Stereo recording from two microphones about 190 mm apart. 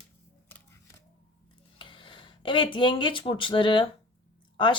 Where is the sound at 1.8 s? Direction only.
25° left (ahead or behind).